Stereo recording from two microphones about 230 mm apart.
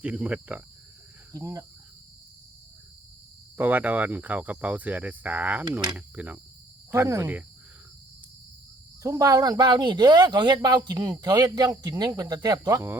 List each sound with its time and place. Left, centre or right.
0.0 s speech: centre
3.6 s speech: centre
9.0 s speech: centre